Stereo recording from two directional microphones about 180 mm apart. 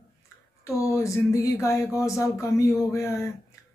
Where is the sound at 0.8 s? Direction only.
15° left (ahead or behind).